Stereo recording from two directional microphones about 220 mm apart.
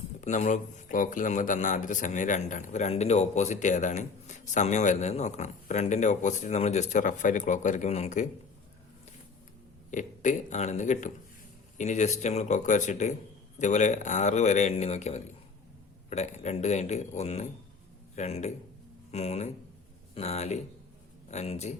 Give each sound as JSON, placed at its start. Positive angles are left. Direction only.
{"t": 0.2, "sound": "a man's voice", "side_deg": 35}
{"t": 9.9, "sound": "a man's voice", "side_deg": 35}